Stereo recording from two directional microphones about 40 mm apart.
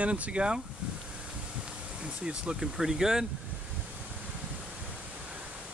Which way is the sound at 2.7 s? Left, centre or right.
Centre.